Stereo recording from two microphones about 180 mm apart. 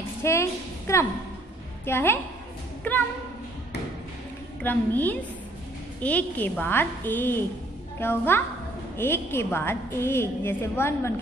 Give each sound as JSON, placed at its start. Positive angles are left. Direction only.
{"t": 0.2, "sound": "a sound", "side_deg": 15}
{"t": 1.9, "sound": "a woman's voice", "side_deg": 15}
{"t": 4.6, "sound": "a woman's voice", "side_deg": 10}